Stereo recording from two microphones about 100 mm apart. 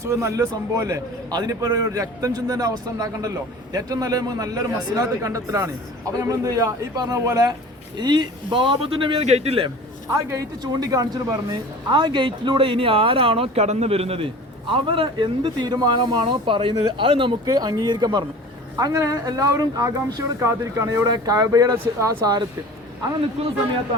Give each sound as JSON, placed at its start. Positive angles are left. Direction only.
{"t": 0.0, "sound": "a man's voice", "side_deg": -30}
{"t": 7.9, "sound": "a man's voice", "side_deg": -45}
{"t": 10.6, "sound": "a man's voice", "side_deg": -40}
{"t": 11.9, "sound": "speech", "side_deg": -50}
{"t": 14.7, "sound": "a man's voice", "side_deg": -60}
{"t": 15.6, "sound": "a man's voice", "side_deg": -45}
{"t": 17.4, "sound": "a man's voice", "side_deg": -40}
{"t": 23.4, "sound": "speech", "side_deg": -90}